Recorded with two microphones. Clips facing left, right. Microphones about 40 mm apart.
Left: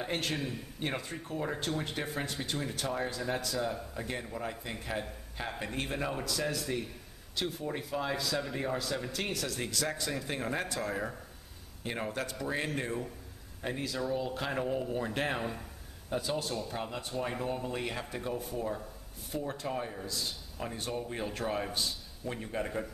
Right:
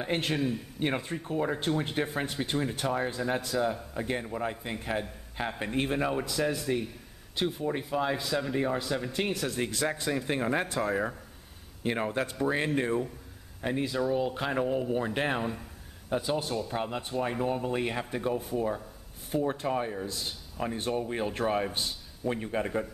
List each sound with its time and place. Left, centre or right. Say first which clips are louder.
0.0 s speech: right 4 dB; centre
0.4 s a man's voice: right 7 dB; centre
0.7 s speech: right 3 dB; right
6.6 s speech: right 5 dB; centre
17.1 s speech: right 5 dB; centre
19.3 s speech: right 7 dB; right